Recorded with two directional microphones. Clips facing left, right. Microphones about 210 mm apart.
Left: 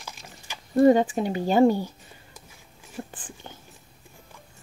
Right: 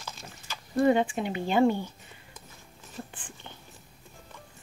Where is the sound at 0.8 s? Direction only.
40° left (ahead or behind).